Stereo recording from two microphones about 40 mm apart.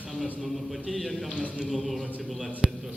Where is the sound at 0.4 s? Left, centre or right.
Centre.